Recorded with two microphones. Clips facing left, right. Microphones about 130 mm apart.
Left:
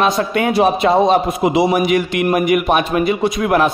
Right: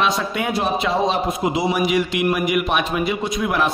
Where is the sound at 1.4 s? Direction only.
60° left (ahead or behind).